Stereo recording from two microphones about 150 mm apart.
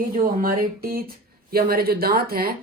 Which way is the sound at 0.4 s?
75° right (ahead or behind).